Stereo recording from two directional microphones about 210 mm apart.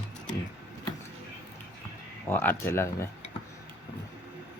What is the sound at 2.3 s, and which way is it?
Speech, 10° left (ahead or behind).